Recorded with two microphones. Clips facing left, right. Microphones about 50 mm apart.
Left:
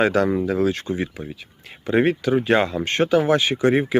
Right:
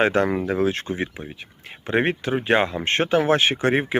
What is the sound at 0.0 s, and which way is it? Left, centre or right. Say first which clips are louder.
Speech: left 1 dB; right.